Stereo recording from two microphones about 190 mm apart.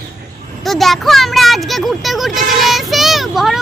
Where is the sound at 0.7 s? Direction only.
Centre (ahead or behind).